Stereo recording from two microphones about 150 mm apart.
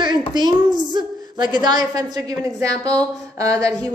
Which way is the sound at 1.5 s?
30° right (ahead or behind).